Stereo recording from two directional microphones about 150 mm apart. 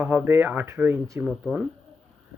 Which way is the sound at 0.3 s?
15° right (ahead or behind).